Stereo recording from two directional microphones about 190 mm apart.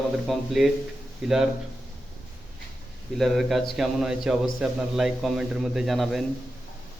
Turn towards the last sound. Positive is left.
turn(degrees=0)  # may be behind; listen again after turning